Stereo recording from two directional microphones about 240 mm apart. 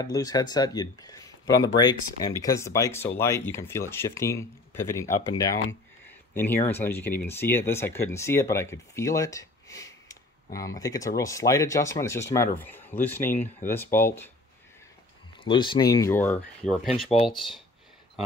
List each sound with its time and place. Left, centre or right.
0.0 s speech: centre
15.4 s speech: centre